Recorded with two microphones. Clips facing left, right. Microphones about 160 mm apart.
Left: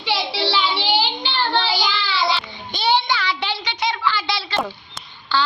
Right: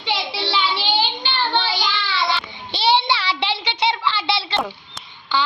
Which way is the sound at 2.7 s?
30° right (ahead or behind).